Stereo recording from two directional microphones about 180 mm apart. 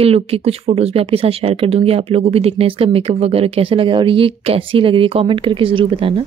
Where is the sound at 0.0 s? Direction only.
35° right (ahead or behind).